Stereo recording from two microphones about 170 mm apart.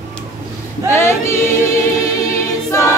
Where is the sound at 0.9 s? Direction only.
15° left (ahead or behind).